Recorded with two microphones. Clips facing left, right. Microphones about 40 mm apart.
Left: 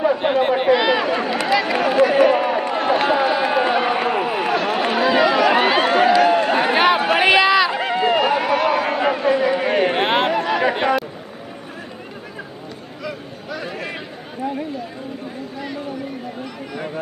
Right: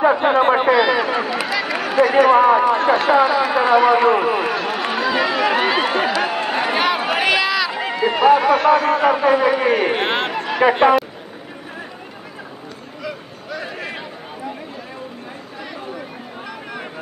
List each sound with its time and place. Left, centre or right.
0.2 s speech: centre
0.7 s a sound: centre
1.0 s run: centre
5.5 s speech: centre
5.8 s run: centre
7.2 s run: centre
7.8 s a sound: centre
9.1 s a man's voice: centre
9.8 s speech: centre
10.6 s speech: centre
13.0 s a sound: centre